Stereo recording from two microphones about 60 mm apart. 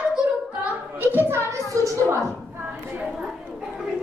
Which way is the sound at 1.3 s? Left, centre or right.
Right.